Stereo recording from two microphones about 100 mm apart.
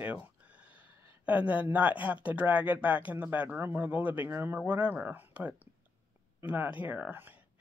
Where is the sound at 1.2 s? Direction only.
15° right (ahead or behind).